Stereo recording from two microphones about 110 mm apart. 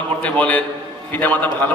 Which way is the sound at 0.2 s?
10° left (ahead or behind).